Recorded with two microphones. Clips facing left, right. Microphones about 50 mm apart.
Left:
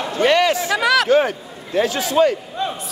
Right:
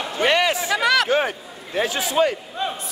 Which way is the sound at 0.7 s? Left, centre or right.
Centre.